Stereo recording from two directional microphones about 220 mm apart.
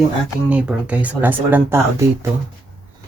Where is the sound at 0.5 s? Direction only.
5° right (ahead or behind).